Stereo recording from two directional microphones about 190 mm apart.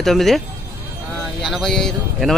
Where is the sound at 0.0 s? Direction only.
Centre (ahead or behind).